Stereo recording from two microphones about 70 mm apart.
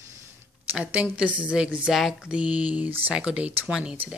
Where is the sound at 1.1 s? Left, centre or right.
Centre.